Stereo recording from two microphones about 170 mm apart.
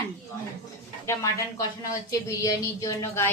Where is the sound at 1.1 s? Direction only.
15° left (ahead or behind).